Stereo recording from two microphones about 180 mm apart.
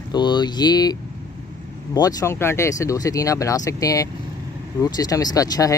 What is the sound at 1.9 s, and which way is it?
Speech, 20° left (ahead or behind).